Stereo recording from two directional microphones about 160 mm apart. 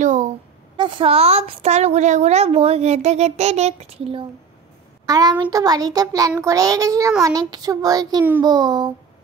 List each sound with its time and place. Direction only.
0.0 s a sound: 50° right (ahead or behind)
0.7 s a woman's voice: 30° right (ahead or behind)
5.0 s child singing: 25° right (ahead or behind)